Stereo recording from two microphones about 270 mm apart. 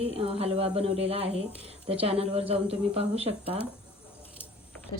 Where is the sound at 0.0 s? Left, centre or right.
Right.